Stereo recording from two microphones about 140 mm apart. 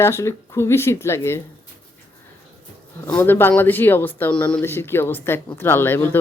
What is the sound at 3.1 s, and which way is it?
Speech, 15° left (ahead or behind).